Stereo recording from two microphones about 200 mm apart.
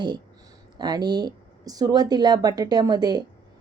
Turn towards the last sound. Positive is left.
turn(degrees=-20)  # may be behind; listen again after turning